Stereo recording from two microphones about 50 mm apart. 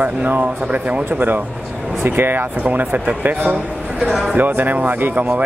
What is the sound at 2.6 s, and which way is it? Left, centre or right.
Speech, right.